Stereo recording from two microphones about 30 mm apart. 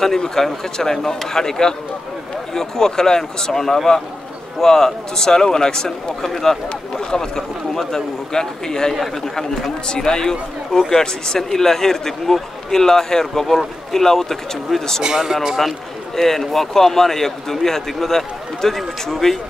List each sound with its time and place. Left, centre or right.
0.4 s a man's voice: centre
6.2 s a man's voice: centre
15.0 s speech: centre
16.2 s a man's voice: centre